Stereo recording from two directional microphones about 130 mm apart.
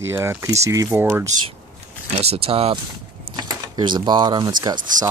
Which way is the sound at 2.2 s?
50° right (ahead or behind).